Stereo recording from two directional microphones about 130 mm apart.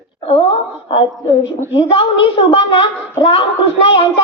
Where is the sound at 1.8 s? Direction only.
45° left (ahead or behind).